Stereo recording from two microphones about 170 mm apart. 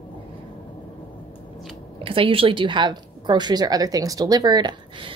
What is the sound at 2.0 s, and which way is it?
A woman's voice, 30° right (ahead or behind).